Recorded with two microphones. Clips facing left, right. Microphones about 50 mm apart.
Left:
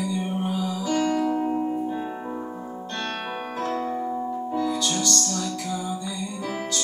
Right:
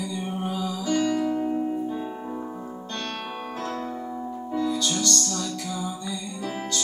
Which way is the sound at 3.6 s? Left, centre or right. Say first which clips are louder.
Left 6 dB; left.